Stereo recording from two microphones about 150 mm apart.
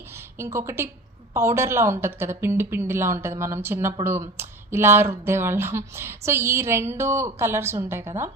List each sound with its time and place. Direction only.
0.3 s speech: 20° right (ahead or behind)